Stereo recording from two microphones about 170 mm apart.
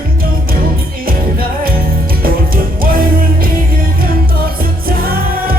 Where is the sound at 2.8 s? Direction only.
60° right (ahead or behind).